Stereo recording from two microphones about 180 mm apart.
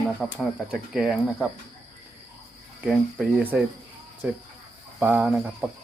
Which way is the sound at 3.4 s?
10° right (ahead or behind).